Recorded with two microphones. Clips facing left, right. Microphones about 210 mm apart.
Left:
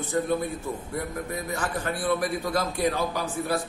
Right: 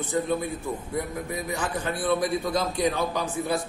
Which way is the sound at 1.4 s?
15° right (ahead or behind).